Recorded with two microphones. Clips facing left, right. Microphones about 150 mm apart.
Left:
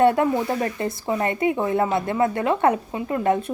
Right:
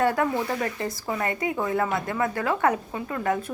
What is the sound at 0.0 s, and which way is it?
Speech, 25° left (ahead or behind).